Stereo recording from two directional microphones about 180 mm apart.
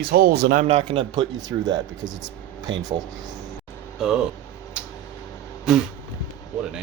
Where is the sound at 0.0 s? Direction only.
55° right (ahead or behind).